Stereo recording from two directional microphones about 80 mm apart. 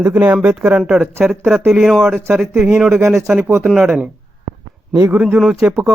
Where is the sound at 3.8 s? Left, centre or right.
Centre.